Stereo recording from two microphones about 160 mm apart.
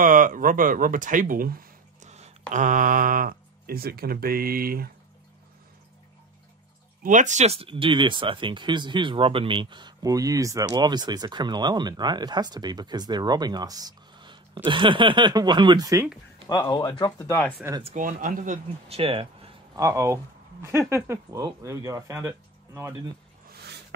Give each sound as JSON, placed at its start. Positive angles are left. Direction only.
{"t": 0.0, "sound": "speech", "side_deg": -55}
{"t": 2.0, "sound": "a sound", "side_deg": -45}
{"t": 2.5, "sound": "speech", "side_deg": -55}
{"t": 7.0, "sound": "speech", "side_deg": -50}
{"t": 16.4, "sound": "speech", "side_deg": 25}
{"t": 17.9, "sound": "speech", "side_deg": -55}
{"t": 18.9, "sound": "speech", "side_deg": -35}
{"t": 19.7, "sound": "speech", "side_deg": -20}